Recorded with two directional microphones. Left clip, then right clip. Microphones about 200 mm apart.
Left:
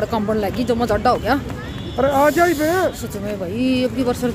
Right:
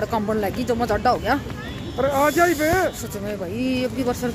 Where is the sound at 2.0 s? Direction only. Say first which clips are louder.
Left 3 dB; 40° left (ahead or behind).